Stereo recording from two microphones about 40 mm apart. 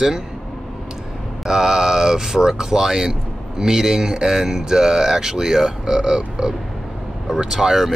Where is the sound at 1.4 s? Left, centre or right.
Centre.